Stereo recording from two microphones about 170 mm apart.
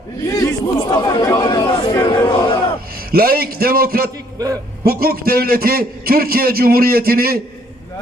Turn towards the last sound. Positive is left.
turn(degrees=-60)  # may be behind; listen again after turning